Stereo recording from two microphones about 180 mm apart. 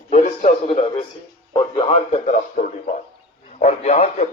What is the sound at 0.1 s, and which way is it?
A man's voice, 35° left (ahead or behind).